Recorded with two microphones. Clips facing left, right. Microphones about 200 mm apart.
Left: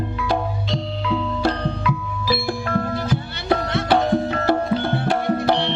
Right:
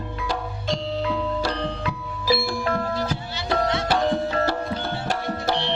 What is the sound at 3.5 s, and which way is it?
Music, 55° left (ahead or behind).